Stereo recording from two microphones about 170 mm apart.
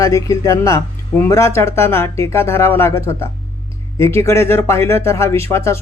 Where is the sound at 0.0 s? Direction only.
20° left (ahead or behind).